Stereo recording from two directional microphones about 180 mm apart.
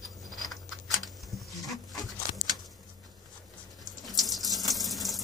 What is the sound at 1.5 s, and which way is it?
Dog, centre (ahead or behind).